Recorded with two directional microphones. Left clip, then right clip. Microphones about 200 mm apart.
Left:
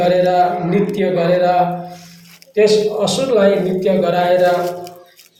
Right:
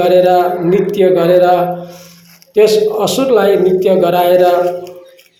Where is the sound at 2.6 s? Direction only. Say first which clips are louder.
Right 3 dB; 30° right (ahead or behind).